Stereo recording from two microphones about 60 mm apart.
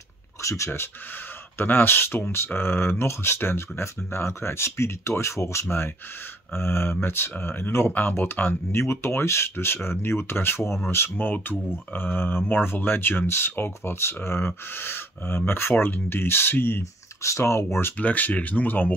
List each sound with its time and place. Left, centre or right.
0.4 s speech: left
1.6 s speech: left
17.2 s speech: left
17.9 s speech: left